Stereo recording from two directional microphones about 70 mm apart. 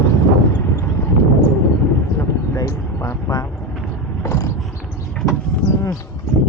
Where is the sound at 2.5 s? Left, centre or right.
Left.